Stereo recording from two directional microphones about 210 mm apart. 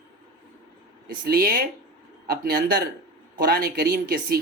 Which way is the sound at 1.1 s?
45° right (ahead or behind).